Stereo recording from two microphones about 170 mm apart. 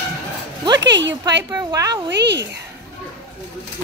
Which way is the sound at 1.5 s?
20° right (ahead or behind).